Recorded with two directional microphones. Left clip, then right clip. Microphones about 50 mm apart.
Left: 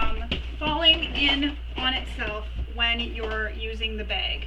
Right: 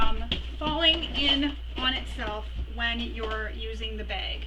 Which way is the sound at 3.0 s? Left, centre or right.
Right.